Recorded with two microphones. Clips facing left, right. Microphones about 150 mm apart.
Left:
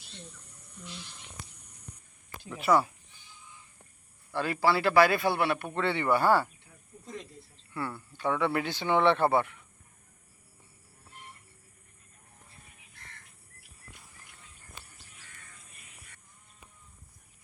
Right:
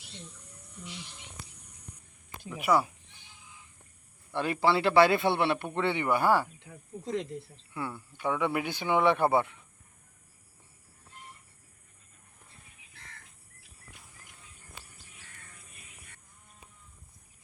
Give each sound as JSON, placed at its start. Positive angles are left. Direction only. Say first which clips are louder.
{"t": 2.4, "sound": "speech", "louder": "left 1 dB", "side_deg": -10}
{"t": 4.3, "sound": "a man's voice", "louder": "even", "side_deg": -20}
{"t": 6.6, "sound": "snake", "louder": "right 10 dB", "side_deg": -90}
{"t": 7.7, "sound": "speech", "louder": "left 1 dB", "side_deg": -15}